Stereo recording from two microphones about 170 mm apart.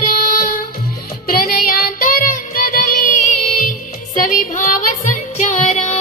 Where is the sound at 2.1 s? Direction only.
55° left (ahead or behind).